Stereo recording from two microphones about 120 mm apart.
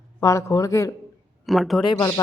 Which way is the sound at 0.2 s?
25° left (ahead or behind).